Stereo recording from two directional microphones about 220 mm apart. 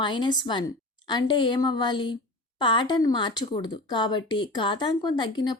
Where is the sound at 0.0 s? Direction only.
20° left (ahead or behind).